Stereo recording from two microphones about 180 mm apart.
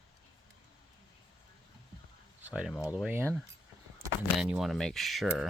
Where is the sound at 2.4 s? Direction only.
5° right (ahead or behind).